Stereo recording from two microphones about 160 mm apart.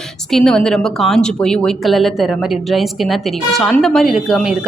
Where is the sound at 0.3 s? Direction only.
5° left (ahead or behind).